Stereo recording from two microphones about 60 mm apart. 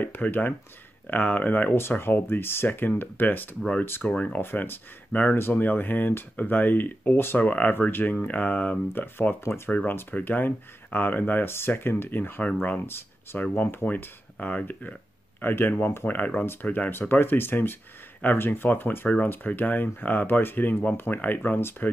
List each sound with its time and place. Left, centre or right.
0.0 s speech: left
1.8 s speech: left
4.1 s speech: left
4.4 s speech: left
16.3 s speech: left